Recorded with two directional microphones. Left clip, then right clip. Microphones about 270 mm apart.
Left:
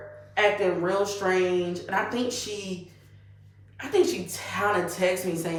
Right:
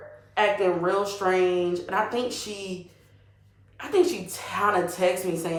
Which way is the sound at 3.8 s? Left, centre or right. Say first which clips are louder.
Even; centre.